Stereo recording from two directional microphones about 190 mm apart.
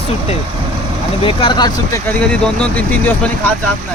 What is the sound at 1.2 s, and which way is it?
Speech, 25° left (ahead or behind).